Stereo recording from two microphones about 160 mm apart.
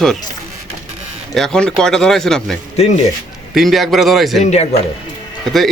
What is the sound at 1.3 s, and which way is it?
A man's voice, 5° left (ahead or behind).